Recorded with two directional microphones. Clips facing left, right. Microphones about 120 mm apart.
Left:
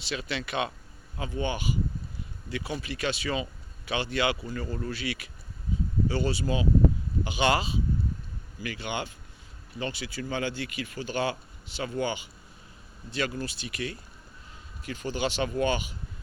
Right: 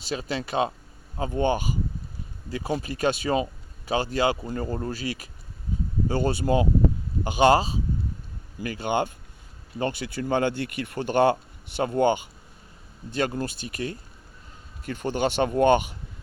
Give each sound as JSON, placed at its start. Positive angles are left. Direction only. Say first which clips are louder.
{"t": 0.0, "sound": "speech", "louder": "right 4 dB", "side_deg": -40}
{"t": 14.8, "sound": "speech", "louder": "right 5 dB", "side_deg": -55}